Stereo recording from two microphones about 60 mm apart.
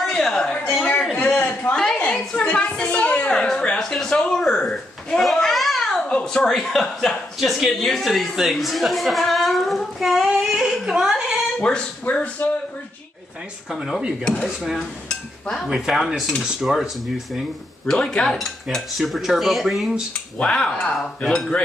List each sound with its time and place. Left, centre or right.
0.1 s a sound: centre
1.1 s a sound: left
2.7 s a woman's voice: centre
3.3 s speech: centre
6.0 s a woman's voice: centre
11.7 s a woman's voice: centre
13.7 s a woman's voice: centre
15.0 s speech: centre
15.7 s a woman's voice: centre
17.8 s speech: centre
18.9 s a woman's voice: centre
20.3 s speech: centre